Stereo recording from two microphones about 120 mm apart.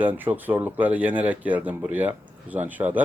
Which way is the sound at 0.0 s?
15° right (ahead or behind).